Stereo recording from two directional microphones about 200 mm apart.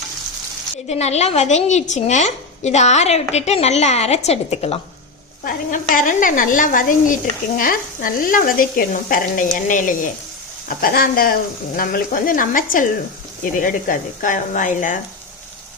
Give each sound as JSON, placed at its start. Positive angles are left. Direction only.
{"t": 0.9, "sound": "a woman's voice", "side_deg": 35}
{"t": 5.5, "sound": "a woman's voice", "side_deg": 45}